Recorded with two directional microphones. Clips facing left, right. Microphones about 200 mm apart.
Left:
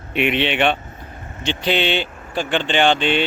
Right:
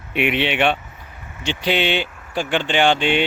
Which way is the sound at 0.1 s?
10° right (ahead or behind).